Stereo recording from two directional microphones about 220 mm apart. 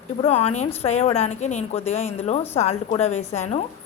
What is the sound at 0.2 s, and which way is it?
A woman's voice, 30° left (ahead or behind).